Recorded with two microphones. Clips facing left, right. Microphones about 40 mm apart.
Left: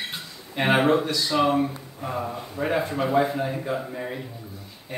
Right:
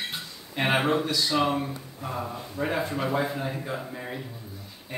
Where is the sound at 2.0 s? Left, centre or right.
Centre.